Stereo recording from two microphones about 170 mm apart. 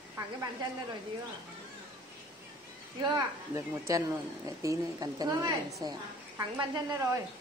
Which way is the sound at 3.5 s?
15° right (ahead or behind).